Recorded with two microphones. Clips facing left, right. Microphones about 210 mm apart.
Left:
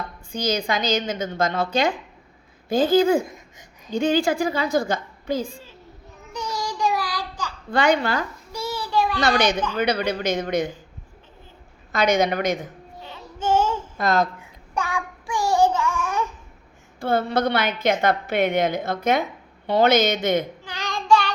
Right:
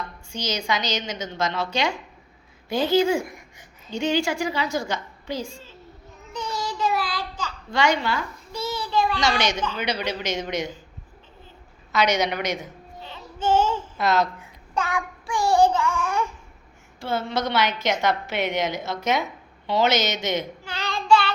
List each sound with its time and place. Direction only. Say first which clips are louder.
0.3 s a woman's voice: left 3 dB; 55° left (ahead or behind)
3.2 s babbling: left 1 dB; 15° left (ahead or behind)
4.0 s a woman's voice: left 3 dB; 50° left (ahead or behind)
6.3 s child singing: left 1 dB; 10° left (ahead or behind)
7.7 s a woman's voice: left 3 dB; 55° left (ahead or behind)
8.5 s child singing: left 1 dB; 10° left (ahead or behind)
9.2 s a woman's voice: left 3 dB; 55° left (ahead or behind)
11.9 s a woman's voice: left 3 dB; 50° left (ahead or behind)
13.1 s child singing: even; 10° left (ahead or behind)
14.0 s a woman's voice: left 1 dB; 50° left (ahead or behind)
15.3 s child singing: right 1 dB; 15° left (ahead or behind)
16.0 s babbling: even; 15° left (ahead or behind)
17.0 s a woman's voice: left 5 dB; 55° left (ahead or behind)
20.7 s child singing: right 2 dB; 15° left (ahead or behind)